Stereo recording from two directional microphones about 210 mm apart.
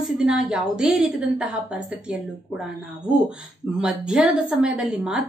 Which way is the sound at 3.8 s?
5° right (ahead or behind).